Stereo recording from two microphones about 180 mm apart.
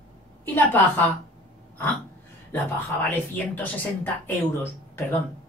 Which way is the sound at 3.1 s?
10° left (ahead or behind).